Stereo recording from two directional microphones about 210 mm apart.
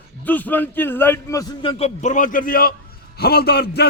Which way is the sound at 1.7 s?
30° left (ahead or behind).